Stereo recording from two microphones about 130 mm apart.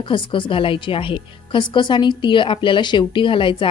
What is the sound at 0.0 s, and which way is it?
A woman's voice, 40° left (ahead or behind).